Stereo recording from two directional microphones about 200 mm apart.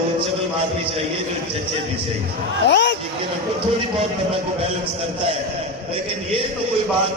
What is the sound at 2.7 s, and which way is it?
Speech, 60° left (ahead or behind).